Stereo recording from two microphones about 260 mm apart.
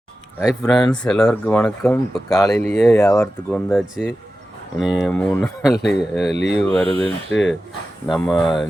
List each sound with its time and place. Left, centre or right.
0.6 s speech: centre
6.3 s speech: left
6.9 s speech: centre